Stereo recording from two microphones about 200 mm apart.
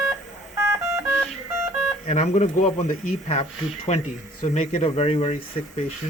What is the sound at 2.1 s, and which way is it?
Speech, 35° left (ahead or behind).